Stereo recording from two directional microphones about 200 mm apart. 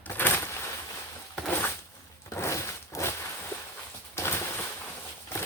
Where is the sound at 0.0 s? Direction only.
10° left (ahead or behind).